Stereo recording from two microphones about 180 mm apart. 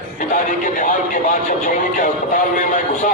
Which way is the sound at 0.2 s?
45° left (ahead or behind).